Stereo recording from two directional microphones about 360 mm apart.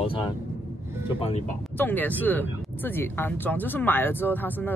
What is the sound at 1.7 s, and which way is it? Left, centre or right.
Speech, centre.